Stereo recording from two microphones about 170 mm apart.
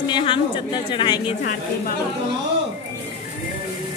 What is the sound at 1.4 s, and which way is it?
Speech, 60° left (ahead or behind).